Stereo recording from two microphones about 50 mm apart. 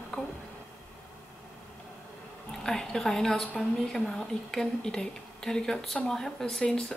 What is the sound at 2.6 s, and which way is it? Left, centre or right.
A woman's voice, centre.